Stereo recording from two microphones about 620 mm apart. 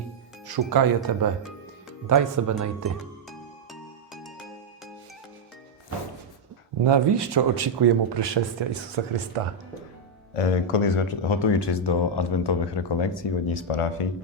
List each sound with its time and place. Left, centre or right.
0.4 s speech: right
3.2 s music: centre
6.8 s speech: right
10.3 s speech: left